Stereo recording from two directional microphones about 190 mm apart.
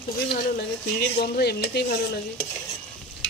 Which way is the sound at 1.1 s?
55° left (ahead or behind).